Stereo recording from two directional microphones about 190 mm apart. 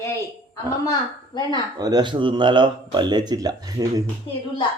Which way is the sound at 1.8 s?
20° right (ahead or behind).